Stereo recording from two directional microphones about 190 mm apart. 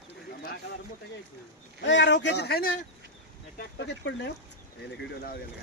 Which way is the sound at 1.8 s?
70° left (ahead or behind).